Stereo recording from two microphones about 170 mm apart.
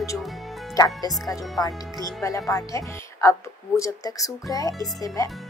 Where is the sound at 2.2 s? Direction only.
20° left (ahead or behind).